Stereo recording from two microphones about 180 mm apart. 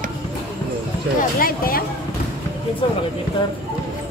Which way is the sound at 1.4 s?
55° left (ahead or behind).